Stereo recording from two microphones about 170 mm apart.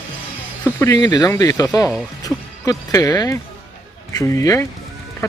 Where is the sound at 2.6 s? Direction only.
20° left (ahead or behind).